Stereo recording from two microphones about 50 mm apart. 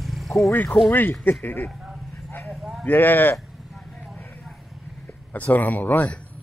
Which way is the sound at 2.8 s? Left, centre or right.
Left.